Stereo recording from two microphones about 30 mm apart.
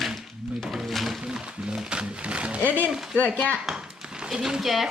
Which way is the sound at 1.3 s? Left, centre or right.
Right.